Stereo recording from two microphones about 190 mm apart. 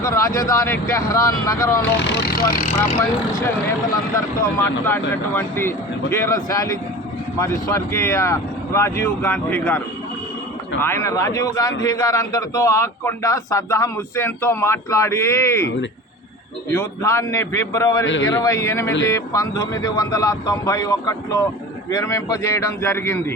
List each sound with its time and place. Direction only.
0.0 s a man's voice: 15° left (ahead or behind)
2.0 s speech: 65° left (ahead or behind); by 2.7 s 45° left (ahead or behind)
3.0 s a man's voice: 15° left (ahead or behind)
4.9 s a man's voice: 10° left (ahead or behind)
16.7 s a man's voice: 15° left (ahead or behind)
18.0 s a man's voice: 80° left
18.3 s a man's voice: 15° left (ahead or behind)